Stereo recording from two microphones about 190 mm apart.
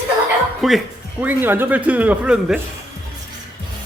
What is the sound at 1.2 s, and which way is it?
Speech, 10° right (ahead or behind).